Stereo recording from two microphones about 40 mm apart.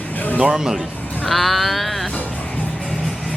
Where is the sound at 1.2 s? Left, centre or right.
Centre.